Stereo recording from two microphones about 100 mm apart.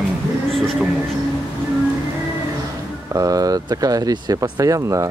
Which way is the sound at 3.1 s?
35° right (ahead or behind).